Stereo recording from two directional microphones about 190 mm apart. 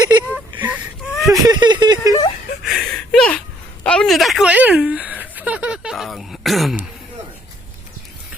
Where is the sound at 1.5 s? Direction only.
25° right (ahead or behind).